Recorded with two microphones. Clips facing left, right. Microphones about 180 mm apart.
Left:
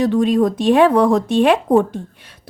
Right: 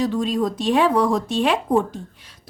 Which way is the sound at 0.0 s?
60° left (ahead or behind).